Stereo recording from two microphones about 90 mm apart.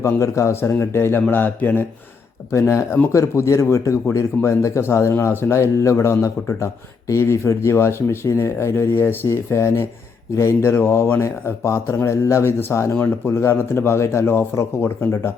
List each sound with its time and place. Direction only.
0.0 s speech: 35° left (ahead or behind)
2.5 s speech: 35° left (ahead or behind)